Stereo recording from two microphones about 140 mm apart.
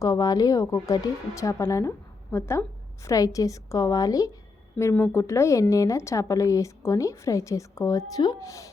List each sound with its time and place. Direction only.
0.0 s a woman's voice: 25° left (ahead or behind)